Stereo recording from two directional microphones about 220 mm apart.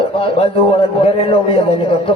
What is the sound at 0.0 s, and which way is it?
A man's voice, 25° left (ahead or behind).